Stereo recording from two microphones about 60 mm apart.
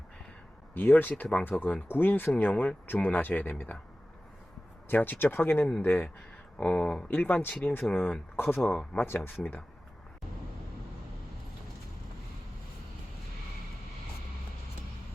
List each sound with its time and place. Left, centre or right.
0.7 s speech: left
4.9 s speech: left
6.6 s speech: left
7.1 s speech: left
7.9 s speech: centre
8.4 s speech: left
8.7 s speech: centre
9.0 s speech: left